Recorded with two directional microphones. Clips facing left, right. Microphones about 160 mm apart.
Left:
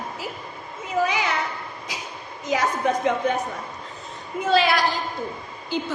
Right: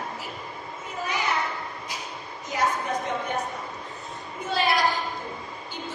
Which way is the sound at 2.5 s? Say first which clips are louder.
Left 4 dB; 90° left.